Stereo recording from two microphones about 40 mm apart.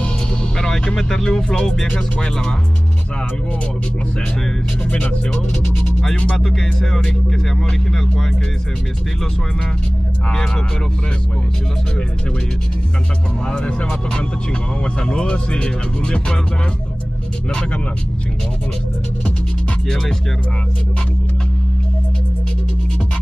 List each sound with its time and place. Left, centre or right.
0.6 s vehicle: centre
0.9 s speech: centre
5.3 s speech: centre
13.5 s speech: left
15.0 s speech: left